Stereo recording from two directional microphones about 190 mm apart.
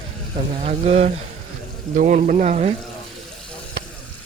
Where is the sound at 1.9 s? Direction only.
45° right (ahead or behind).